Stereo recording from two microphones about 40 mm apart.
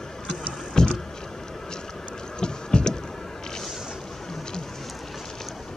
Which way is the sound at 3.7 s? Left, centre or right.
Centre.